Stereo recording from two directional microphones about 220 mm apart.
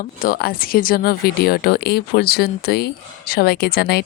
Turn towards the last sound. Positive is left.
turn(degrees=45)  # may be behind; listen again after turning